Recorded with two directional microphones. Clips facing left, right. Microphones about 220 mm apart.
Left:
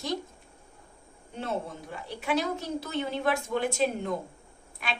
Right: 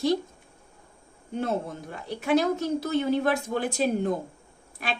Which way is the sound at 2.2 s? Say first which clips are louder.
Right 6 dB; 45° right (ahead or behind).